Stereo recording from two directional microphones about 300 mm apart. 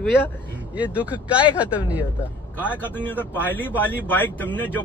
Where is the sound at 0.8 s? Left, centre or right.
Centre.